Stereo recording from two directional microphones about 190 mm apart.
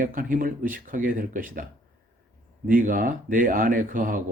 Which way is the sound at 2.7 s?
45° right (ahead or behind).